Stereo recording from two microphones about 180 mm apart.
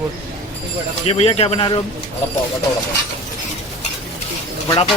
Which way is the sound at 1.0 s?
35° left (ahead or behind).